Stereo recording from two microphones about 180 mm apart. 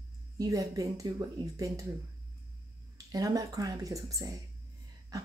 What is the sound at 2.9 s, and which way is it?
Speech, 20° right (ahead or behind).